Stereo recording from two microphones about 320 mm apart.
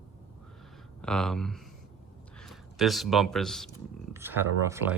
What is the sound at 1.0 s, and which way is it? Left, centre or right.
Speech, centre.